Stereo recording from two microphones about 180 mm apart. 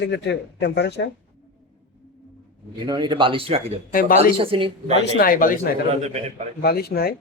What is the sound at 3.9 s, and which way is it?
Speech, 50° left (ahead or behind).